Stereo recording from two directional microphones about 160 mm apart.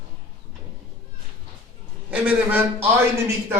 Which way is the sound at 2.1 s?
10° right (ahead or behind).